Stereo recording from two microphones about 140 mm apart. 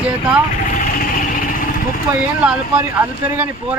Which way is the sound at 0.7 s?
90° left.